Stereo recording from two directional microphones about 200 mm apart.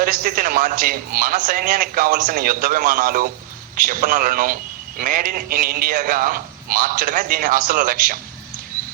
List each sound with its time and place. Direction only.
0.0 s a man's voice: 45° right (ahead or behind)